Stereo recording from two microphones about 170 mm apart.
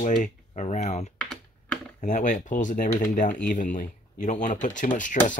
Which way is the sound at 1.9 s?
50° left (ahead or behind).